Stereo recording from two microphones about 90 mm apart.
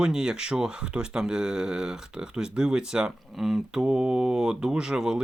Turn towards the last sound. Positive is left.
turn(degrees=-5)  # may be behind; listen again after turning